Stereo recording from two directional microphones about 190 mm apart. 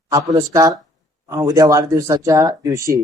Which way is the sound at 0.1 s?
20° right (ahead or behind).